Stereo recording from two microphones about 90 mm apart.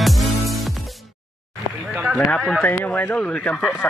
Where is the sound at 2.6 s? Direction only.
20° left (ahead or behind).